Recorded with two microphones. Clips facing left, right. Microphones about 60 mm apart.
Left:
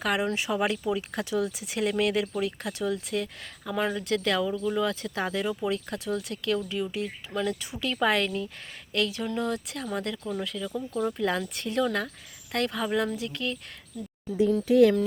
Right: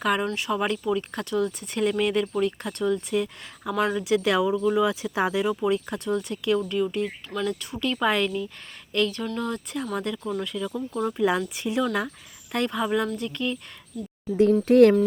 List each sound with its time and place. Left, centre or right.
0.0 s speech: centre
0.3 s speech: centre
14.6 s speech: right